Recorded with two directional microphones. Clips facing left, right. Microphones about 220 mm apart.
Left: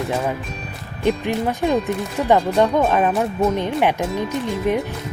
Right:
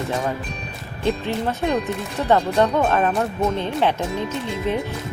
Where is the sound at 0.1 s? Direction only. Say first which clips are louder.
Left 2 dB; 5° left (ahead or behind).